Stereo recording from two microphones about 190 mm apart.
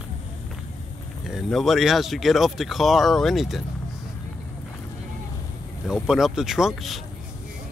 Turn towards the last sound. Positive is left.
turn(degrees=0)  # may be behind; listen again after turning